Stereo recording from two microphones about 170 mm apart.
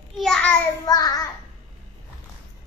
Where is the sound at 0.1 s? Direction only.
5° left (ahead or behind).